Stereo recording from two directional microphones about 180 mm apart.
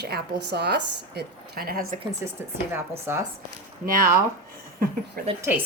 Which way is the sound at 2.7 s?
15° right (ahead or behind).